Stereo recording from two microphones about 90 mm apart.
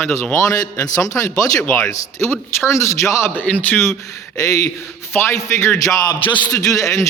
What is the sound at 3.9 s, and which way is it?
A man's voice, 40° left (ahead or behind).